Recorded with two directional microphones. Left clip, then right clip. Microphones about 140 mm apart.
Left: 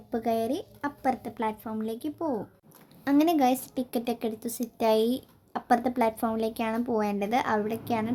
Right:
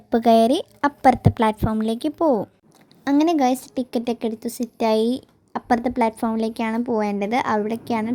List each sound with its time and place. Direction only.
0.1 s a woman's voice: 65° right (ahead or behind)
3.0 s a woman's voice: 30° right (ahead or behind)